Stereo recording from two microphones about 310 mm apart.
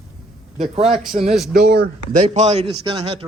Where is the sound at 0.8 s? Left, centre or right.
Centre.